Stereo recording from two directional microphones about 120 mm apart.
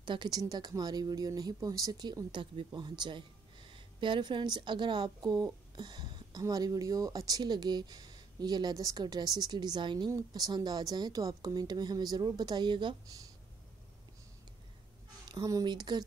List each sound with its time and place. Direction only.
0.0 s speech: 40° right (ahead or behind)
15.2 s speech: 30° right (ahead or behind)